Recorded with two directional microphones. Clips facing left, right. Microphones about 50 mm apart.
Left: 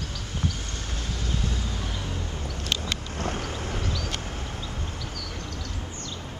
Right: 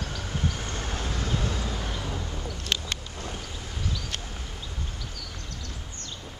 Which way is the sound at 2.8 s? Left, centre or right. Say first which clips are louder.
Left 5 dB; left.